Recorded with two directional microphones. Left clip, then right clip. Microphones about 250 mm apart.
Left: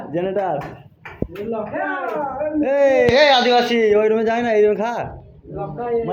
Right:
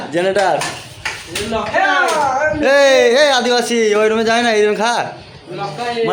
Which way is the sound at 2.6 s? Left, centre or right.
Right.